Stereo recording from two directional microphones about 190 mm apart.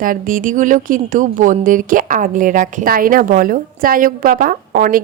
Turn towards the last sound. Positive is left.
turn(degrees=-45)  # may be behind; listen again after turning